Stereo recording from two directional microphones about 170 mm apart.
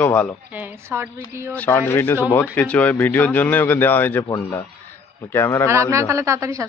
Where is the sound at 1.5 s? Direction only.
10° left (ahead or behind).